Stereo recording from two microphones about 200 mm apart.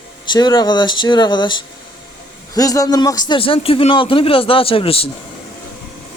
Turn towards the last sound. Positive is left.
turn(degrees=30)  # may be behind; listen again after turning